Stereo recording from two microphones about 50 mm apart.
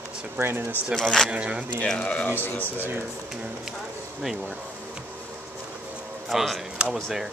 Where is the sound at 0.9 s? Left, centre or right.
Centre.